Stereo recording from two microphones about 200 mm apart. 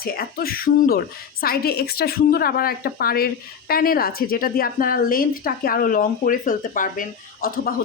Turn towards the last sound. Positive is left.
turn(degrees=45)  # may be behind; listen again after turning